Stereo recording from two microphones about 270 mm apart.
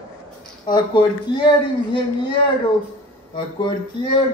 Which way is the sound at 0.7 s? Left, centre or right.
Centre.